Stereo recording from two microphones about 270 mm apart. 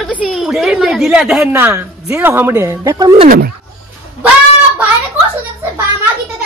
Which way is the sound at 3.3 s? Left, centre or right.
Right.